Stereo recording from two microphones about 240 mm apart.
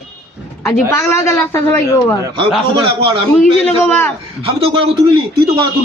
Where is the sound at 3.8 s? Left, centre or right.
Centre.